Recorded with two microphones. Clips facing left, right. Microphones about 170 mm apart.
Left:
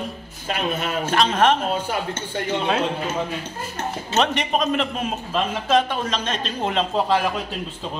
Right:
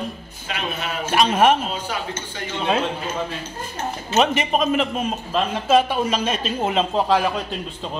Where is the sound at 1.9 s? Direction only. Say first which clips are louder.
Left 2 dB; 55° left (ahead or behind).